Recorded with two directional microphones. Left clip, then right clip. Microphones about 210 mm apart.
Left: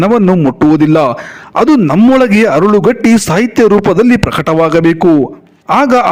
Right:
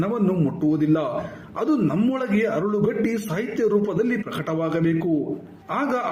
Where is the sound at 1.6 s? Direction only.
45° left (ahead or behind).